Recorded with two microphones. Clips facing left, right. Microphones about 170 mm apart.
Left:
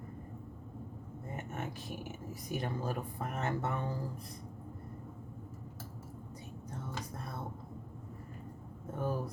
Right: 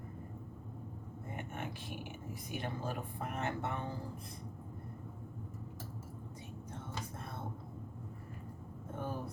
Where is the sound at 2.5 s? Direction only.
40° left (ahead or behind).